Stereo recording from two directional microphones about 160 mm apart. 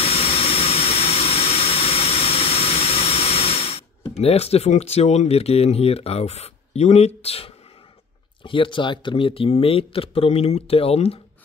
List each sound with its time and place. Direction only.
0.0 s jet engine: 35° left (ahead or behind)
4.2 s speech: 40° left (ahead or behind)